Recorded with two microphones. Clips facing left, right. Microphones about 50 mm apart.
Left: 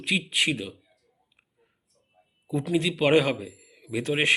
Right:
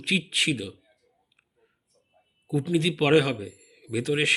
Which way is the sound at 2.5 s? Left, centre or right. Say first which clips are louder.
Right 1 dB; left.